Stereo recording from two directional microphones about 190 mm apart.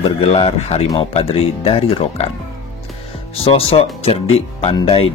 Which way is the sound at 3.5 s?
30° left (ahead or behind).